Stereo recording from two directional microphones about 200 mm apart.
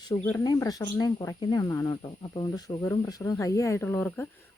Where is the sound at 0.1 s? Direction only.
15° left (ahead or behind).